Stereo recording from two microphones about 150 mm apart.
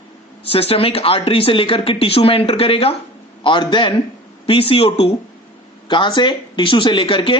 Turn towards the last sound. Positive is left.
turn(degrees=35)  # may be behind; listen again after turning